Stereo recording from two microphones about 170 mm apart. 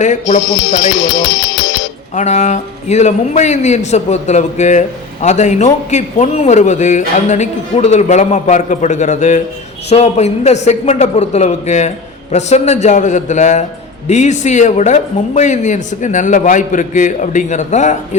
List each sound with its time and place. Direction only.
0.0 s a man's voice: 45° left (ahead or behind)
2.1 s a man's voice: 45° left (ahead or behind)